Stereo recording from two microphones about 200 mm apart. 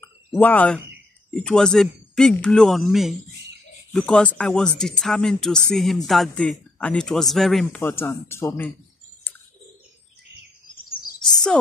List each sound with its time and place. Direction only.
0.3 s a man's voice: 10° left (ahead or behind)